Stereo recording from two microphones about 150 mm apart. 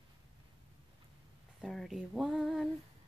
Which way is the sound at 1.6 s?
Centre (ahead or behind).